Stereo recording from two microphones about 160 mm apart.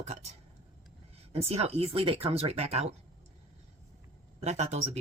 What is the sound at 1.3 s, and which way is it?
Speech, 40° right (ahead or behind).